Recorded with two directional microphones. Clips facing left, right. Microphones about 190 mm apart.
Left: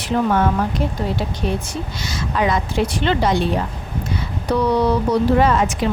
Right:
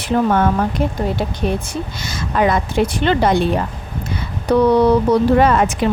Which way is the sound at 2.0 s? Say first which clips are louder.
Right 3 dB; 50° right (ahead or behind).